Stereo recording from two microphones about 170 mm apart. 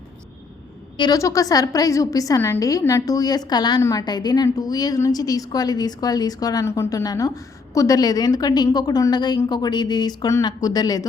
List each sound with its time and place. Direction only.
0.9 s a woman's voice: 25° left (ahead or behind)